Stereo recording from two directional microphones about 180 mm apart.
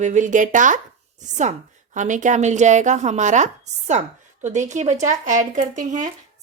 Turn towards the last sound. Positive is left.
turn(degrees=-45)  # may be behind; listen again after turning